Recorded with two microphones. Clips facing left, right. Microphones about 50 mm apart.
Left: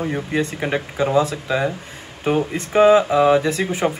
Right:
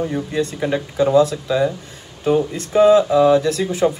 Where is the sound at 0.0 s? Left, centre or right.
Left.